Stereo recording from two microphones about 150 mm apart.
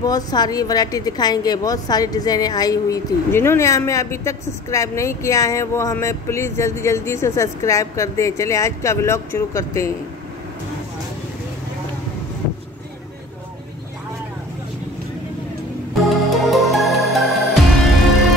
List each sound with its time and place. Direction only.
0.0 s a woman's voice: 25° left (ahead or behind)
16.3 s music: centre (ahead or behind)